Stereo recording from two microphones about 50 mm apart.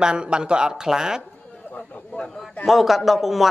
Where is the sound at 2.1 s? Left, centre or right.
Centre.